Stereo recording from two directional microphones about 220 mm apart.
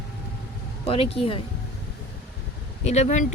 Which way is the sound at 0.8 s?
25° left (ahead or behind).